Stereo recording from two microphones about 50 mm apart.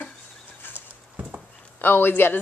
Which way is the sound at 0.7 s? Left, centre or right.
Right.